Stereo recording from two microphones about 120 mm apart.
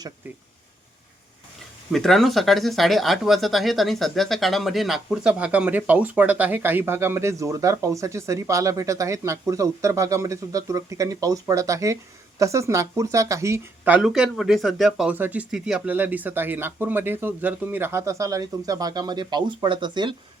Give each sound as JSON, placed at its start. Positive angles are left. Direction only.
{"t": 1.9, "sound": "speech", "side_deg": 0}
{"t": 14.0, "sound": "speech", "side_deg": -5}
{"t": 15.1, "sound": "speech", "side_deg": -15}